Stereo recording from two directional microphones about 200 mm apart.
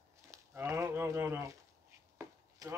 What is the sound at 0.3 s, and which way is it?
Livestock, 15° right (ahead or behind).